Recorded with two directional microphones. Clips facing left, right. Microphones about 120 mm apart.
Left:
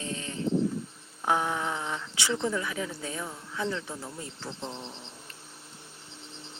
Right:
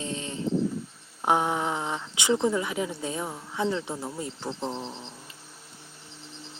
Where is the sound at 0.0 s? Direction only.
25° right (ahead or behind).